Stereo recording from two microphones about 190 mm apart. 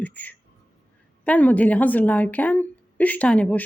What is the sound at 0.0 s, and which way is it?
A woman's voice, 10° left (ahead or behind).